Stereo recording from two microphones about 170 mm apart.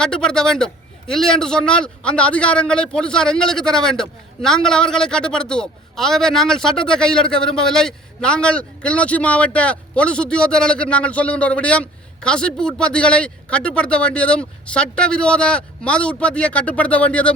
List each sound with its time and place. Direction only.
0.0 s a man's voice: 5° left (ahead or behind)